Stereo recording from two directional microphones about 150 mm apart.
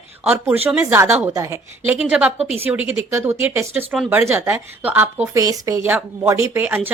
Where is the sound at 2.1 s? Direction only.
10° right (ahead or behind).